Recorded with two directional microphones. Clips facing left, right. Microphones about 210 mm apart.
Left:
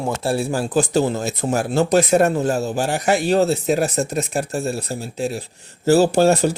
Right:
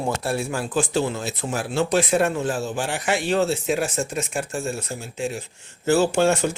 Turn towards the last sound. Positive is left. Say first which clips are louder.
# left 4 dB
turn(degrees=35)  # may be behind; listen again after turning